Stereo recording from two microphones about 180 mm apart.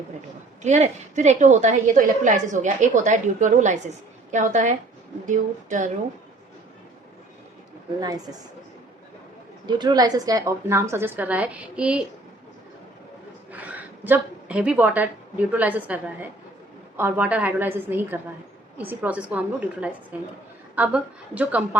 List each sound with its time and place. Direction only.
0.6 s a woman's voice: 40° right (ahead or behind)
8.0 s a woman's voice: 20° right (ahead or behind)
9.6 s a woman's voice: 25° right (ahead or behind); by 12.0 s 5° right (ahead or behind)
13.5 s a woman's voice: 10° right (ahead or behind)